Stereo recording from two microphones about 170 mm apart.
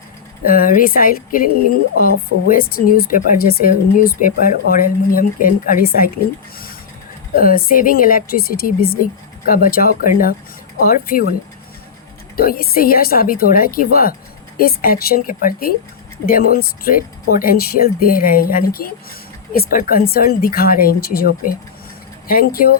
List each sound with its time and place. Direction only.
0.4 s speech: 55° left (ahead or behind)
2.5 s speech: 60° left (ahead or behind)
7.3 s speech: 55° left (ahead or behind)
12.4 s speech: 60° left (ahead or behind)